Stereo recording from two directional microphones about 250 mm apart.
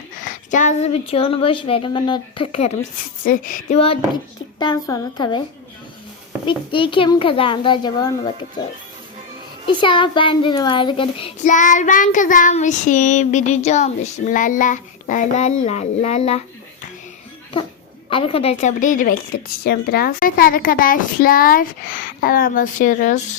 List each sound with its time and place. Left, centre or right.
0.3 s a child's voice: left
6.4 s a child's voice: centre
9.6 s a child's voice: centre
18.1 s a woman's voice: left